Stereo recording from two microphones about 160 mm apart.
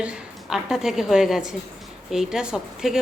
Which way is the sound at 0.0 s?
5° right (ahead or behind).